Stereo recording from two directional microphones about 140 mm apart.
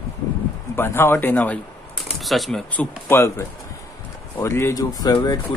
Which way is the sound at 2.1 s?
Centre (ahead or behind).